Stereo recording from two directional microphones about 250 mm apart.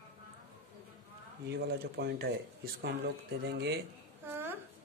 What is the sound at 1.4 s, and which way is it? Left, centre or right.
Speech, right.